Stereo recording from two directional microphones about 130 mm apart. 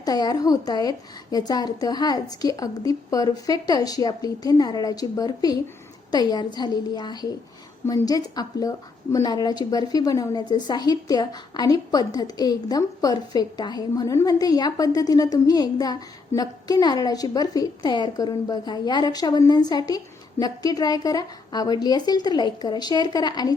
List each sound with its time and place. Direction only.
0.0 s a woman's voice: 30° left (ahead or behind)